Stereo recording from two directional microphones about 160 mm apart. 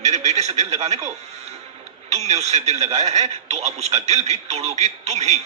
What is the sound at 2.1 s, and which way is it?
Speech, 45° right (ahead or behind).